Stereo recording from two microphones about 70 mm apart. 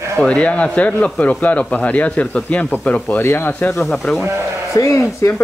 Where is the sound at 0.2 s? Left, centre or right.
Centre.